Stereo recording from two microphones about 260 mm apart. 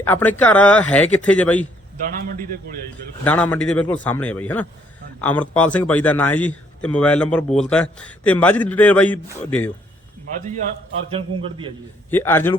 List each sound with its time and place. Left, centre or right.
0.0 s speech: centre
3.2 s speech: centre
10.3 s a man's voice: right
12.1 s a man's voice: centre